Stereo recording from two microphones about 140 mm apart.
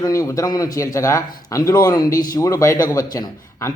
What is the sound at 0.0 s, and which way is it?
A man's voice, 25° left (ahead or behind).